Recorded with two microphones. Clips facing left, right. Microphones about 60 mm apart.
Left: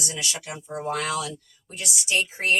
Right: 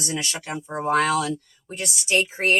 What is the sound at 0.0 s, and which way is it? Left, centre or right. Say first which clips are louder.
Speech: right 3 dB; right.